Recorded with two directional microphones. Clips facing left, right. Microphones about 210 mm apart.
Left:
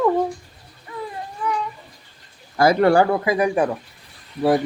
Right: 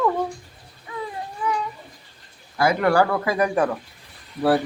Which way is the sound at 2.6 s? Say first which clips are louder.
Left 4 dB; 35° left (ahead or behind).